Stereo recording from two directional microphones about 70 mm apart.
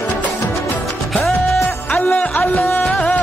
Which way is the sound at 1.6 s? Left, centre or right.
Left.